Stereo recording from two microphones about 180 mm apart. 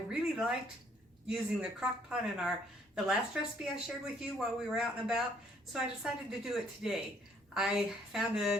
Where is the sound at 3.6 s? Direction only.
Centre (ahead or behind).